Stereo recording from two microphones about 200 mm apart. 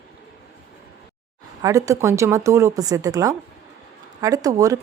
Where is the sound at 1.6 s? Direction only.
15° right (ahead or behind).